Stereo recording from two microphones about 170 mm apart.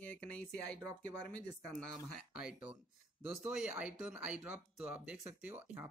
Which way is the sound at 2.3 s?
5° right (ahead or behind).